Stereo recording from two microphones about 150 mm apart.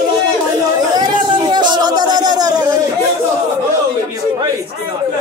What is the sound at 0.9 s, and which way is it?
Speech, 30° right (ahead or behind).